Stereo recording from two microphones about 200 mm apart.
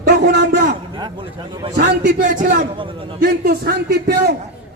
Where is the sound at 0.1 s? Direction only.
55° right (ahead or behind).